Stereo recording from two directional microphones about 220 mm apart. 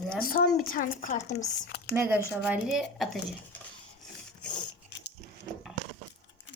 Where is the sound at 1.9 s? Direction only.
10° right (ahead or behind).